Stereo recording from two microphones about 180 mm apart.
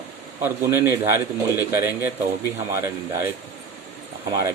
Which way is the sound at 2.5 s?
15° right (ahead or behind).